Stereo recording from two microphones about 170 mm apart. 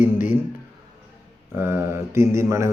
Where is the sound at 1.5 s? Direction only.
15° right (ahead or behind).